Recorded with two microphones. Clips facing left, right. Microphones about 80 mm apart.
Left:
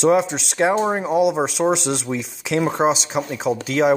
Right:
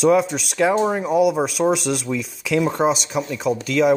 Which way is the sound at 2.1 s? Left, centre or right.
Left.